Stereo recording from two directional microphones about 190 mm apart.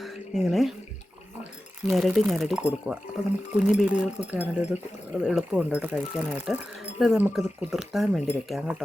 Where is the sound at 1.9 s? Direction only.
Centre (ahead or behind).